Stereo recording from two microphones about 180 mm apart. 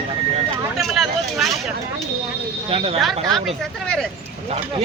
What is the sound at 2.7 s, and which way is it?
Speech, 30° right (ahead or behind).